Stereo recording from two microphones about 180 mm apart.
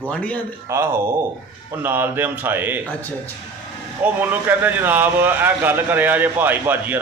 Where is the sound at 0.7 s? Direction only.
15° right (ahead or behind).